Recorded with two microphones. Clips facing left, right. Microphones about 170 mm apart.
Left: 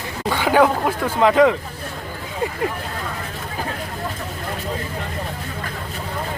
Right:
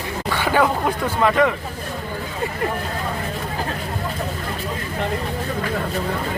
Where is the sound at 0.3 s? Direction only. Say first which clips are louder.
Left 3 dB; 15° left (ahead or behind).